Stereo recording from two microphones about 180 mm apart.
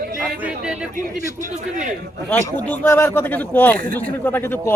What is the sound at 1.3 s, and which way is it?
Speech, 45° right (ahead or behind).